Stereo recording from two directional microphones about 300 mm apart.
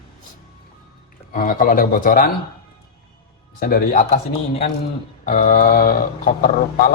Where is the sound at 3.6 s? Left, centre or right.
Left.